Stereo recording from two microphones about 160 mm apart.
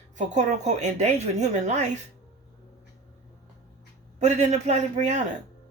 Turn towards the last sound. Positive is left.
turn(degrees=-45)  # may be behind; listen again after turning